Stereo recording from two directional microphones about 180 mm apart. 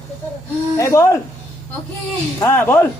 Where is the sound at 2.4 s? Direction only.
10° left (ahead or behind).